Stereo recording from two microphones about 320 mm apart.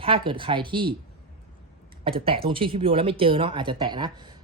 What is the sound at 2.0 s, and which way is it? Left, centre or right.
Speech, centre.